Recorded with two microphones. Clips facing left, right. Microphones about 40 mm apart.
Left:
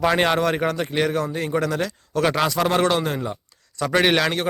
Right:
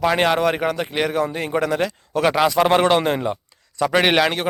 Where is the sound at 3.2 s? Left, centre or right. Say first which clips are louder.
Right 5 dB; right.